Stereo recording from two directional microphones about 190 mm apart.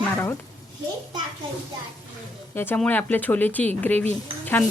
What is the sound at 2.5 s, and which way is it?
Speech, 10° left (ahead or behind).